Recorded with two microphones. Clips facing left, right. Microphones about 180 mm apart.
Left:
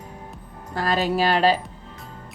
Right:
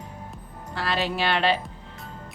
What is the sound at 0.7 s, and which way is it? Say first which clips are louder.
Speech: left 5 dB; 45° left (ahead or behind).